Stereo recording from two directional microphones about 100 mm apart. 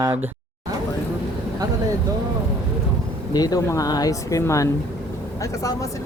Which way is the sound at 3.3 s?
40° left (ahead or behind).